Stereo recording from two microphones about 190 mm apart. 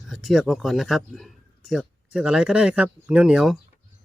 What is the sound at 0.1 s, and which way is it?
Speech, centre (ahead or behind).